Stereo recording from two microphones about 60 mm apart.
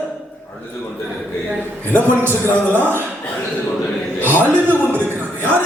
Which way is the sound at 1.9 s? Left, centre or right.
Right.